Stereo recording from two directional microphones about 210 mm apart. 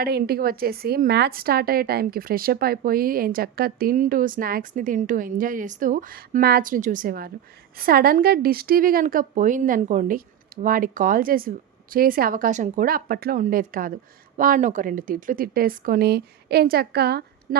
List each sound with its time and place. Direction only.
0.0 s a woman's voice: 45° right (ahead or behind)